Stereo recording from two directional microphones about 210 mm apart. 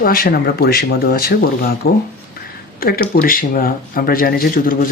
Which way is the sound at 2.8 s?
45° left (ahead or behind).